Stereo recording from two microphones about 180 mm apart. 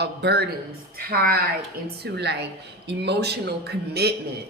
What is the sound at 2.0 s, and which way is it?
A woman's voice, 70° right (ahead or behind).